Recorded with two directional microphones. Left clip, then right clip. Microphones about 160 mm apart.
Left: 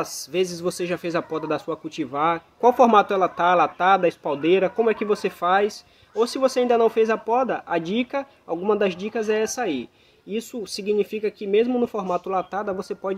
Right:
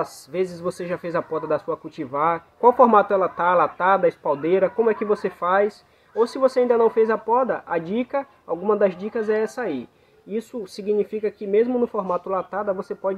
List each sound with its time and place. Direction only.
0.0 s speech: 15° left (ahead or behind)